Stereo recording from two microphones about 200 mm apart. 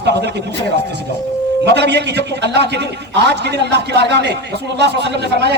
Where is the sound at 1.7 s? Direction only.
60° right (ahead or behind).